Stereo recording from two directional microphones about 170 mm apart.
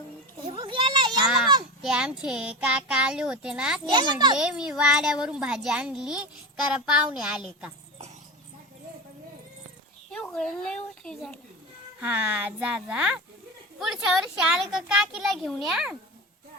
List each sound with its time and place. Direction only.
0.4 s children playing: 30° right (ahead or behind)
1.8 s a woman's voice: 5° right (ahead or behind)
3.9 s a child's voice: 25° right (ahead or behind)
4.4 s a woman's voice: 5° right (ahead or behind)
10.1 s a woman's voice: 5° left (ahead or behind)
11.9 s a woman's voice: 10° right (ahead or behind)